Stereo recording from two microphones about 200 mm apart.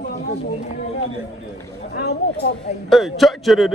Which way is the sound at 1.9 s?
50° left (ahead or behind).